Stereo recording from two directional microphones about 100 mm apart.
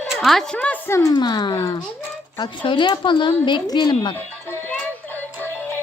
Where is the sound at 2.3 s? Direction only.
55° left (ahead or behind).